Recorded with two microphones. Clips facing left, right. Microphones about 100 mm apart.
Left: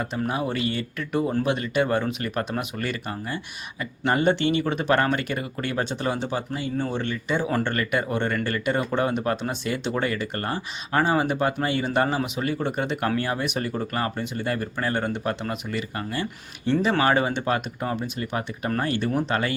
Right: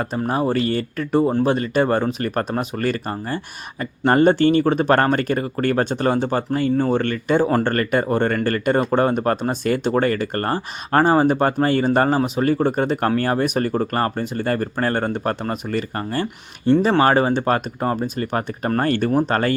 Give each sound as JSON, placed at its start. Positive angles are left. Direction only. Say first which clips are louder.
{"t": 0.0, "sound": "speech", "louder": "right 5 dB", "side_deg": -40}